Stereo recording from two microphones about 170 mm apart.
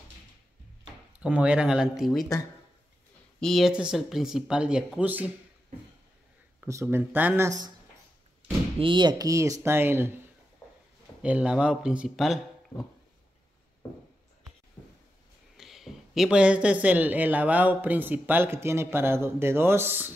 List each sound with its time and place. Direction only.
1.2 s speech: 5° right (ahead or behind)
3.3 s speech: centre (ahead or behind)
6.6 s speech: 15° right (ahead or behind)
8.7 s speech: 30° right (ahead or behind); by 10.1 s 15° right (ahead or behind)
11.2 s speech: 5° right (ahead or behind)
14.8 s a sound: 5° left (ahead or behind)
15.5 s speech: centre (ahead or behind)